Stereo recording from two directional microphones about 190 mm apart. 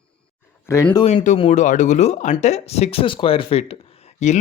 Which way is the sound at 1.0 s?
40° left (ahead or behind).